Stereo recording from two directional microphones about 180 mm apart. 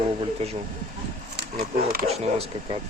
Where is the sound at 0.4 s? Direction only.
35° right (ahead or behind).